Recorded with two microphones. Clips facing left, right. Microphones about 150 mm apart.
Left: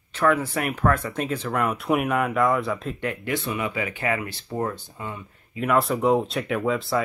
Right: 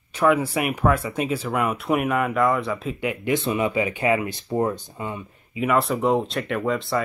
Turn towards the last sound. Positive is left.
turn(degrees=0)  # may be behind; listen again after turning